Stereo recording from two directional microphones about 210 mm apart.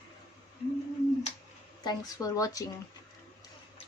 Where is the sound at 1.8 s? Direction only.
20° left (ahead or behind).